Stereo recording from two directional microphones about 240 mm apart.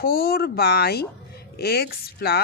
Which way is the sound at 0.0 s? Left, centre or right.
Left.